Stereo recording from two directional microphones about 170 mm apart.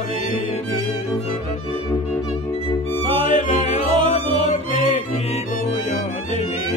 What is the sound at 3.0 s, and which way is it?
Music, 30° right (ahead or behind).